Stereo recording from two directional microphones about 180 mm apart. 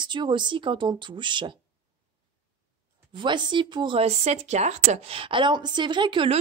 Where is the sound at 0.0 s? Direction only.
25° right (ahead or behind).